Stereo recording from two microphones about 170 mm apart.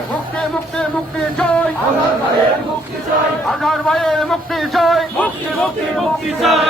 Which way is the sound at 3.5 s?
Centre (ahead or behind).